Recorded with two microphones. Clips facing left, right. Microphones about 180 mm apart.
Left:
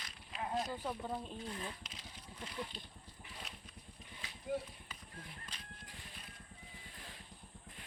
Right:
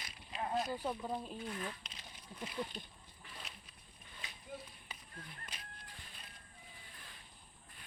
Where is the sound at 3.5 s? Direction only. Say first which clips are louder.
Left 2 dB; centre (ahead or behind).